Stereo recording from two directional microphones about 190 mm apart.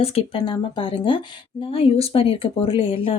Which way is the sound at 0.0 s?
30° left (ahead or behind).